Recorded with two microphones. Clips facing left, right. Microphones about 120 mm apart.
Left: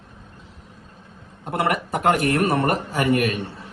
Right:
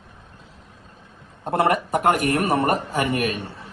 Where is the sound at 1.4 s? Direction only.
25° right (ahead or behind).